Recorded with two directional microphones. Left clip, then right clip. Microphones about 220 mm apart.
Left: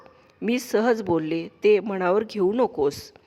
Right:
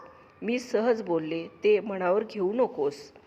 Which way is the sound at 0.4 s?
45° left (ahead or behind).